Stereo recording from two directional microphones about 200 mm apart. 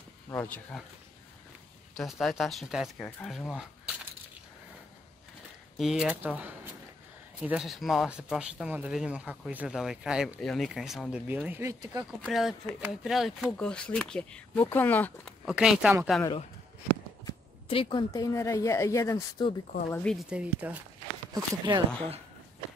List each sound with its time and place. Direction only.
0.3 s speech: 10° left (ahead or behind)
2.0 s speech: centre (ahead or behind)
5.8 s speech: 5° right (ahead or behind); by 12.1 s 20° right (ahead or behind)
12.3 s speech: centre (ahead or behind)
15.4 s speech: 5° right (ahead or behind)
17.2 s speech: 25° left (ahead or behind)
19.9 s speech: 5° left (ahead or behind)
21.3 s speech: 20° right (ahead or behind)